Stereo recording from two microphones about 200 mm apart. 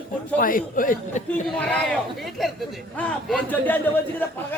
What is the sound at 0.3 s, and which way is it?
Speech, 45° left (ahead or behind).